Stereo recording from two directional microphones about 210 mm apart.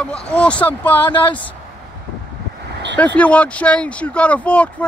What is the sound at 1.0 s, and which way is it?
Speech, 20° left (ahead or behind).